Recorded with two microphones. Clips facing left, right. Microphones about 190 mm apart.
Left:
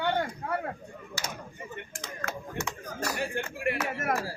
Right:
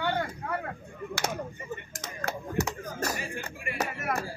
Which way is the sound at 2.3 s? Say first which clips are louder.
Right 5 dB; 35° right (ahead or behind).